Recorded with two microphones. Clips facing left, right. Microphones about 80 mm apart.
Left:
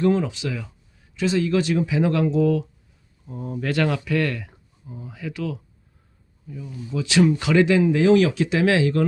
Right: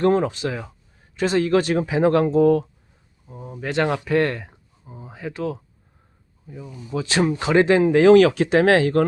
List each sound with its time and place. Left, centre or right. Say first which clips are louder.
0.0 s speech: right 2 dB; right
3.2 s speech: left 6 dB; centre
3.6 s speech: right 1 dB; right